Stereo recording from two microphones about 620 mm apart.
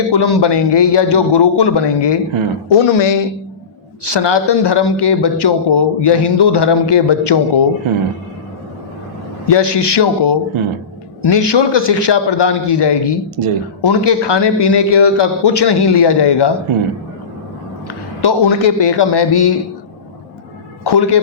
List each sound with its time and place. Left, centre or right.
0.1 s speech: left
9.5 s speech: left
13.4 s speech: right
13.8 s speech: left
18.2 s speech: left
20.8 s speech: left